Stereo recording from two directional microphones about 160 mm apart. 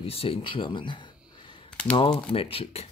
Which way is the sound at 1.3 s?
30° left (ahead or behind).